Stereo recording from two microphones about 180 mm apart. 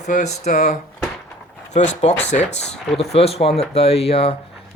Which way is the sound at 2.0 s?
35° left (ahead or behind).